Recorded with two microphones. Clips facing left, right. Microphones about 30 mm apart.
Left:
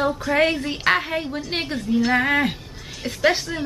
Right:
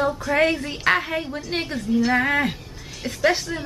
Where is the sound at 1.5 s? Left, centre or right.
Left.